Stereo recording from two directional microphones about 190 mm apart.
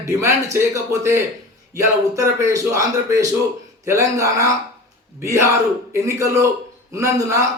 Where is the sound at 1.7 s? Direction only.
15° right (ahead or behind).